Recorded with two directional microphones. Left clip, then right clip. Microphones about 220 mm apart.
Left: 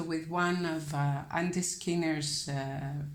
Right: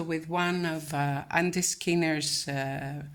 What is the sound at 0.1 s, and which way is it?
A woman's voice, 35° right (ahead or behind).